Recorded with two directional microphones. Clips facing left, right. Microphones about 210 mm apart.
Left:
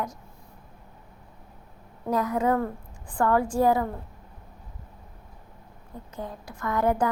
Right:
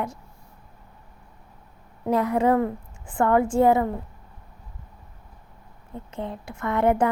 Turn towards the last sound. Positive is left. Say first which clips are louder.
# right 3 dB
turn(degrees=-25)  # may be behind; listen again after turning